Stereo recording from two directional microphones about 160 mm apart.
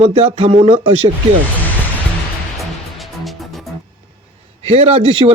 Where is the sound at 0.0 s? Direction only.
40° right (ahead or behind).